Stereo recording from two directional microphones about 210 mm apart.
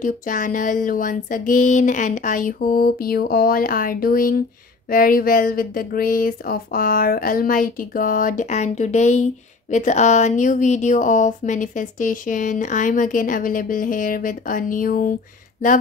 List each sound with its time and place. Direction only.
0.0 s speech: 40° left (ahead or behind)